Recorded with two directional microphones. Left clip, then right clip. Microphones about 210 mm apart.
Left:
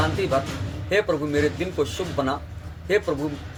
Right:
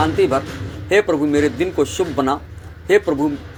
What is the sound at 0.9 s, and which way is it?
A man's voice, 35° right (ahead or behind).